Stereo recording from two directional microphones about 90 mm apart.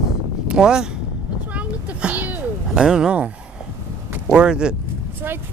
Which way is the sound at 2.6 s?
5° right (ahead or behind).